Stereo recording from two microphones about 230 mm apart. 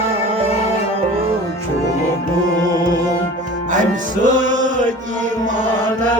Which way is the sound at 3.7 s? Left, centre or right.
Right.